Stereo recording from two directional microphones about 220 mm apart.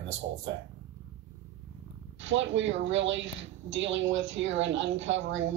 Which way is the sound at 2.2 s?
55° right (ahead or behind).